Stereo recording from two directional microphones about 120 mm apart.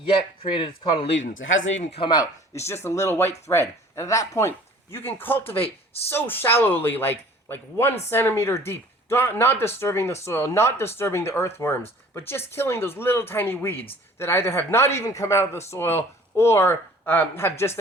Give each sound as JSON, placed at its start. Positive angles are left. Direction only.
{"t": 0.0, "sound": "speech", "side_deg": 45}
{"t": 1.8, "sound": "speech", "side_deg": 60}
{"t": 2.0, "sound": "speech", "side_deg": 35}
{"t": 5.6, "sound": "speech", "side_deg": 55}
{"t": 6.1, "sound": "a man's voice", "side_deg": 15}